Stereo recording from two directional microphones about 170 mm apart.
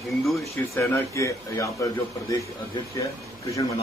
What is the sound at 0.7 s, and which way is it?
Speech, 15° left (ahead or behind).